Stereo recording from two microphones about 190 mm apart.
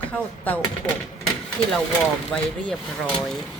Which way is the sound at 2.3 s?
5° left (ahead or behind).